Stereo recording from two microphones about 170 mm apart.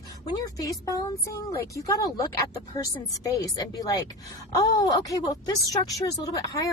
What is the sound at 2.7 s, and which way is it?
A woman's voice, 20° left (ahead or behind).